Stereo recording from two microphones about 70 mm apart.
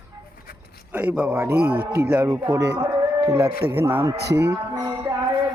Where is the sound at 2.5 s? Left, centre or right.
Right.